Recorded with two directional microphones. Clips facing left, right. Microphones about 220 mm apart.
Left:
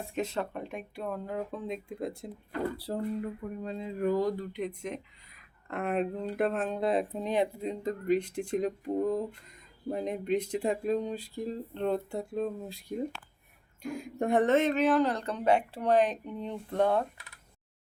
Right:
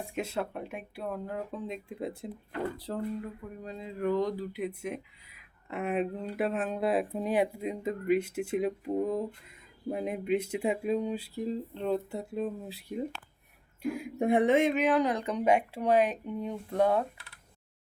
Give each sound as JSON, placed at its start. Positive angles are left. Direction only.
{"t": 0.1, "sound": "speech", "side_deg": -10}
{"t": 2.7, "sound": "speech", "side_deg": 10}
{"t": 3.4, "sound": "speech", "side_deg": 50}
{"t": 4.1, "sound": "speech", "side_deg": 0}